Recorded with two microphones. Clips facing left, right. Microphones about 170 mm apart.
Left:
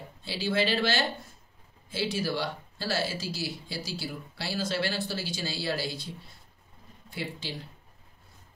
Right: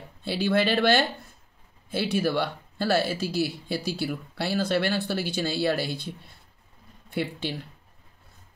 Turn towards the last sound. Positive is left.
turn(degrees=-60)  # may be behind; listen again after turning